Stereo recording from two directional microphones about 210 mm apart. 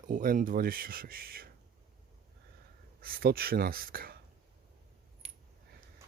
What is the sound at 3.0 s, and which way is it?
Speech, 45° right (ahead or behind).